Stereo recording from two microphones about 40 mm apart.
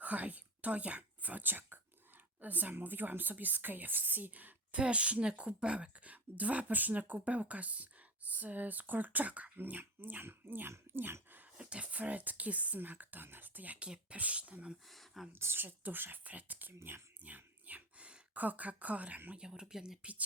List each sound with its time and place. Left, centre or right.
0.0 s speech: right
4.7 s a woman's voice: right
9.6 s speech: right
11.5 s speech: right
13.7 s a woman's voice: right
14.8 s speech: centre
15.4 s speech: right
16.2 s speech: right
17.2 s dog: right
18.3 s speech: right
19.4 s speech: centre
20.0 s speech: right